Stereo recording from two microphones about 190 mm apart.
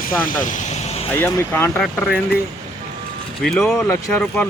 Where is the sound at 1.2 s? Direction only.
10° left (ahead or behind).